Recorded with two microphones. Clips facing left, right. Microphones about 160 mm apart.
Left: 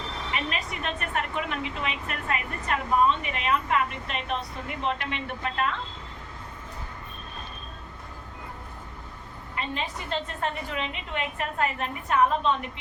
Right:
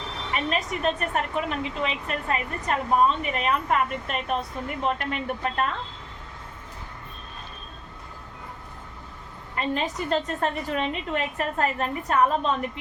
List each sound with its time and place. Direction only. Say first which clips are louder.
0.5 s a woman's voice: right 6 dB; 35° right (ahead or behind)
9.6 s a woman's voice: right 6 dB; 45° right (ahead or behind)